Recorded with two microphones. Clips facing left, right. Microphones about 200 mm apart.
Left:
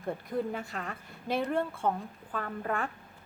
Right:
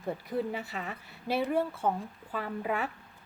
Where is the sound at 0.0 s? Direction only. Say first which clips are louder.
Even; 5° right (ahead or behind).